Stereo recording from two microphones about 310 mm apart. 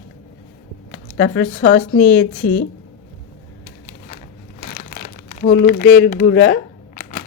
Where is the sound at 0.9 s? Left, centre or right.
Left.